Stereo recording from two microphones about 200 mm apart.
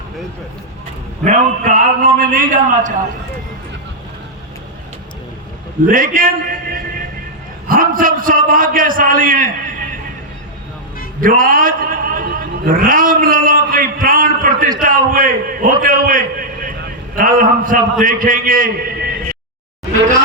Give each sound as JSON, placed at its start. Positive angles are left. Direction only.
{"t": 1.2, "sound": "a man's voice", "side_deg": -40}
{"t": 5.8, "sound": "a man's voice", "side_deg": -45}
{"t": 11.2, "sound": "a man's voice", "side_deg": -45}